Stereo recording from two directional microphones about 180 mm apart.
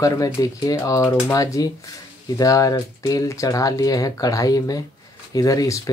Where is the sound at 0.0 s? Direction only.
20° left (ahead or behind).